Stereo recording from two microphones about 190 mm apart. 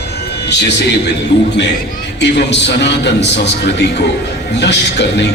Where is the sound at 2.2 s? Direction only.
65° left (ahead or behind).